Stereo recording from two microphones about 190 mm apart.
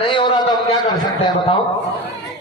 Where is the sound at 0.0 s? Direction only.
25° left (ahead or behind).